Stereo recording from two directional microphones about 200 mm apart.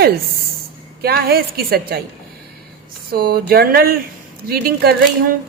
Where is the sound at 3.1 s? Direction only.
50° right (ahead or behind).